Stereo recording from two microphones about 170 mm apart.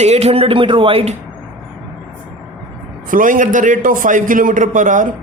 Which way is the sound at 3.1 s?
50° right (ahead or behind).